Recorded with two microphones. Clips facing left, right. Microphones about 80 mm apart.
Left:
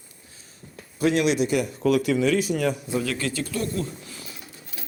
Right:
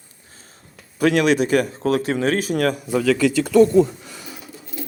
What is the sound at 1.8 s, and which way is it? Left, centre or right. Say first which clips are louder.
A man's voice: right 1 dB; right.